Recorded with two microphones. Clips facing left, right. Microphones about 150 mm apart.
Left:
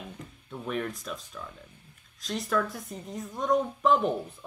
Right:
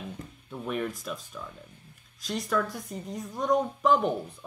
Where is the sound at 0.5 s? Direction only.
5° right (ahead or behind).